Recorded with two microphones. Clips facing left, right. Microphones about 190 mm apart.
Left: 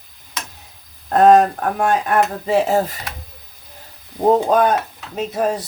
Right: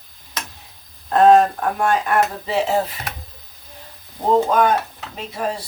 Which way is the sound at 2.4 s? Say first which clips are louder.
Left 3 dB; 45° left (ahead or behind).